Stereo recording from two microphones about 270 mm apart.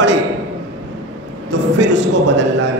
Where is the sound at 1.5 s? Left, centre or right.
Right.